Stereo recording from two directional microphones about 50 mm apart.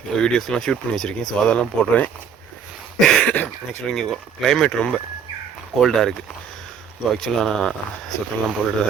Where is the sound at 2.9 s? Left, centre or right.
Centre.